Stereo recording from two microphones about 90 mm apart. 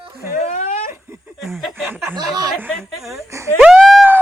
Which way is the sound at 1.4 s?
Centre (ahead or behind).